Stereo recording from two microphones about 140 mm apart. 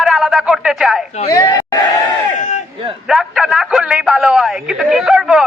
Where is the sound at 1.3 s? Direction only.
25° left (ahead or behind).